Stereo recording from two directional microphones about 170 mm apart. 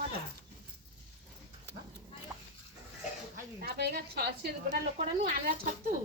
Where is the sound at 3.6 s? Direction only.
70° right (ahead or behind).